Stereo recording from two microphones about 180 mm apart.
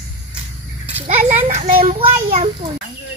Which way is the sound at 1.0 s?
45° right (ahead or behind).